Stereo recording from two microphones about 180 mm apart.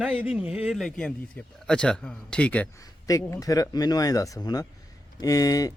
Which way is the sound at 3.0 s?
20° left (ahead or behind).